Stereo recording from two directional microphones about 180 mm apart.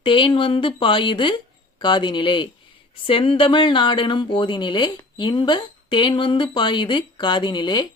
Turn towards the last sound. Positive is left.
turn(degrees=25)  # may be behind; listen again after turning